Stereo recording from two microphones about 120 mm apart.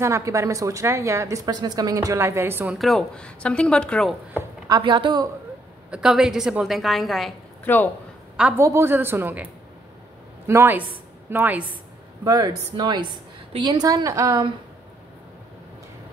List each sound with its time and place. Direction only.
0.0 s speech: 25° right (ahead or behind)
2.7 s a woman's voice: centre (ahead or behind)
4.6 s a woman's voice: 35° right (ahead or behind)
5.9 s a woman's voice: 5° right (ahead or behind)
7.6 s a woman's voice: 15° left (ahead or behind)
8.5 s a woman's voice: 20° right (ahead or behind)
12.3 s a woman's voice: 30° right (ahead or behind)